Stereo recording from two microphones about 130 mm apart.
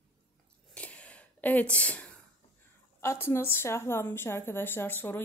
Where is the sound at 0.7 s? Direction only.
10° left (ahead or behind).